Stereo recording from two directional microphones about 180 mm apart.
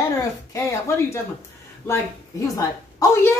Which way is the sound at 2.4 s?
20° left (ahead or behind).